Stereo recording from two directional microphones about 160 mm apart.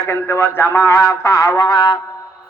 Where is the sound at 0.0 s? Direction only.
15° left (ahead or behind).